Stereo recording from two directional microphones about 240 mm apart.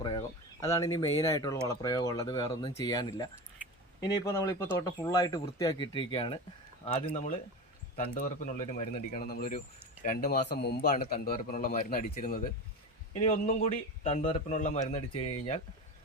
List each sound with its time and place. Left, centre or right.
0.0 s a man's voice: centre